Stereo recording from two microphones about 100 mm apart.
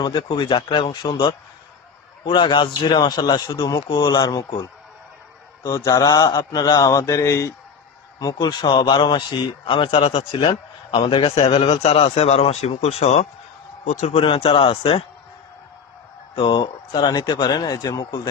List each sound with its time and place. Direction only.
0.0 s a man's voice: 50° left (ahead or behind)
5.6 s speech: 40° left (ahead or behind)
8.2 s a man's voice: 45° left (ahead or behind); by 10.5 s 65° left (ahead or behind)
10.9 s a man's voice: 55° left (ahead or behind); by 13.2 s 90° left
14.1 s a man's voice: 65° left (ahead or behind)
16.3 s a man's voice: 50° left (ahead or behind)